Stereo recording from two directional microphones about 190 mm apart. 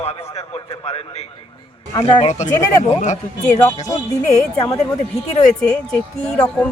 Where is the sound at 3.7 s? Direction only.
20° left (ahead or behind).